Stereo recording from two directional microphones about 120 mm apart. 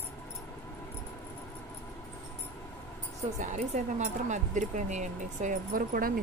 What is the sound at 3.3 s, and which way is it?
Speech, 80° right.